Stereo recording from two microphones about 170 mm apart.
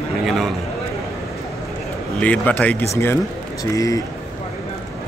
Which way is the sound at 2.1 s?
5° left (ahead or behind).